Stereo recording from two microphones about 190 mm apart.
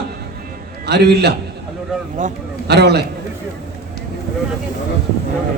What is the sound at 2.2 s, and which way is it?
Speech, 40° right (ahead or behind).